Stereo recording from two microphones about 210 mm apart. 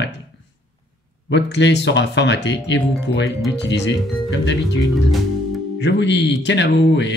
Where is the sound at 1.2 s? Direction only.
55° left (ahead or behind).